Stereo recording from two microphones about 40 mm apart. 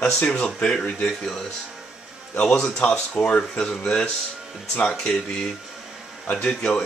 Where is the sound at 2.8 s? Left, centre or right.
Left.